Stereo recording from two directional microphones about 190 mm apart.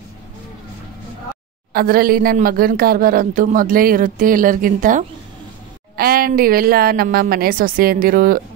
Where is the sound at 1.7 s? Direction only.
50° right (ahead or behind).